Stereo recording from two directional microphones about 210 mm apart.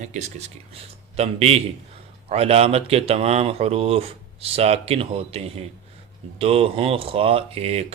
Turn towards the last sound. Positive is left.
turn(degrees=-30)  # may be behind; listen again after turning